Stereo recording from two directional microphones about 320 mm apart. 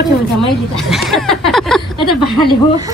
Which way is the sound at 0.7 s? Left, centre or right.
Centre.